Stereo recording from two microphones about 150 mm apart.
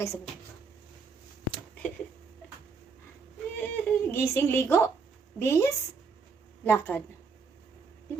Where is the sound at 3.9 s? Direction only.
15° left (ahead or behind).